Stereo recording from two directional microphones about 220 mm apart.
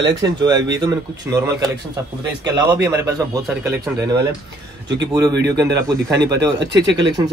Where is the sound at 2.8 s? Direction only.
15° right (ahead or behind).